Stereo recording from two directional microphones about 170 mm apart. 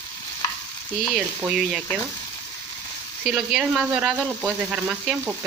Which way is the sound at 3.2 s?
5° right (ahead or behind).